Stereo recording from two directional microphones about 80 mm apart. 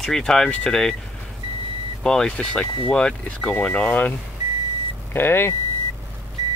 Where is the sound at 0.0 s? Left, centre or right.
Centre.